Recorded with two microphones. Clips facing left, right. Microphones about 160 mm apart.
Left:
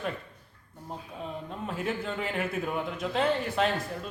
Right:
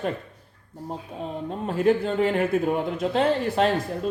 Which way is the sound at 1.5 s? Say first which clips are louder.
Right 13 dB; 35° right (ahead or behind).